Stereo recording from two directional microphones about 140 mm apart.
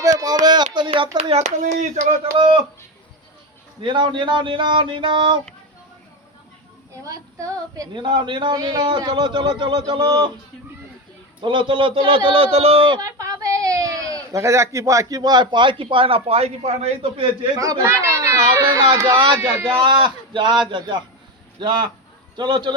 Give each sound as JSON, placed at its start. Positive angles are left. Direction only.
{"t": 0.0, "sound": "a sound", "side_deg": -25}
{"t": 0.4, "sound": "a woman's voice", "side_deg": -30}
{"t": 2.4, "sound": "a woman's voice", "side_deg": -40}
{"t": 3.8, "sound": "a woman's voice", "side_deg": -35}
{"t": 7.0, "sound": "a woman's voice", "side_deg": -25}
{"t": 11.3, "sound": "a woman's voice", "side_deg": -35}
{"t": 13.0, "sound": "speech", "side_deg": -25}
{"t": 17.6, "sound": "speech", "side_deg": -25}
{"t": 19.4, "sound": "a man's voice", "side_deg": -15}
{"t": 19.7, "sound": "a woman's voice", "side_deg": -35}
{"t": 22.4, "sound": "a woman's voice", "side_deg": -30}